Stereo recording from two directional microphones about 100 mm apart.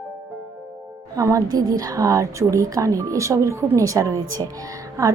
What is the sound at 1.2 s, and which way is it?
A woman's voice, 35° right (ahead or behind).